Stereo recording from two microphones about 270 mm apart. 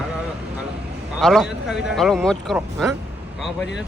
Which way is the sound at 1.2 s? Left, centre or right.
Centre.